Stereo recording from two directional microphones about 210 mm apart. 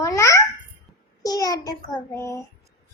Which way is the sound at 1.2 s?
20° left (ahead or behind).